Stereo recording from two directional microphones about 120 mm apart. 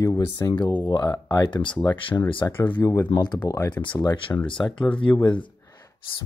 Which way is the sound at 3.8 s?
40° left (ahead or behind).